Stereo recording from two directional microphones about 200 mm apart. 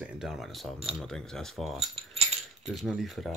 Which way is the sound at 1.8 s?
30° right (ahead or behind).